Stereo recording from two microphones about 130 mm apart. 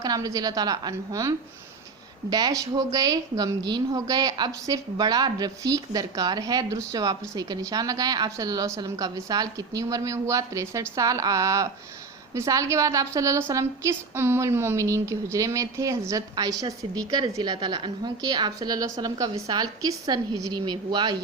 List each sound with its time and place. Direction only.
0.0 s a woman's voice: 30° right (ahead or behind)
2.3 s a woman's voice: 25° right (ahead or behind)